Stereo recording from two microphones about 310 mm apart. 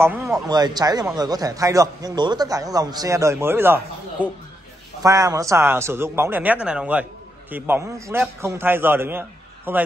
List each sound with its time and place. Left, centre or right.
0.0 s speech: centre